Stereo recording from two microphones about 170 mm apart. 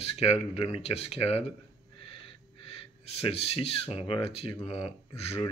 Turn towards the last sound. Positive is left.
turn(degrees=35)  # may be behind; listen again after turning